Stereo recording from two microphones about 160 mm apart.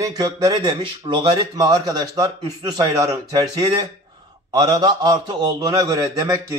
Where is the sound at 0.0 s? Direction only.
25° right (ahead or behind).